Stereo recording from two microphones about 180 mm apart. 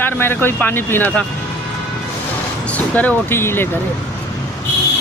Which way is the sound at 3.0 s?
10° left (ahead or behind).